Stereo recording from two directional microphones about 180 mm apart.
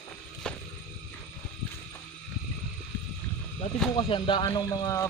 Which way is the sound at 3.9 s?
25° left (ahead or behind).